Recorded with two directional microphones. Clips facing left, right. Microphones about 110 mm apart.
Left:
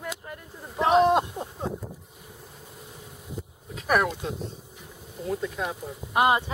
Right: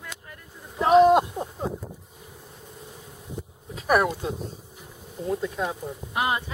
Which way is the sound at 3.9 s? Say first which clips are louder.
Right 2 dB; 5° right (ahead or behind).